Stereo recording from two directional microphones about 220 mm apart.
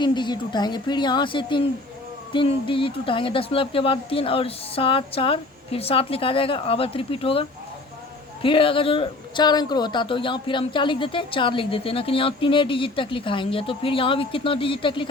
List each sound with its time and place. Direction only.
0.0 s a man's voice: 20° left (ahead or behind)